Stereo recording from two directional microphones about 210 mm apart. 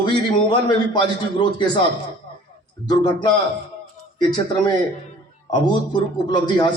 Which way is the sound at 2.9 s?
20° left (ahead or behind).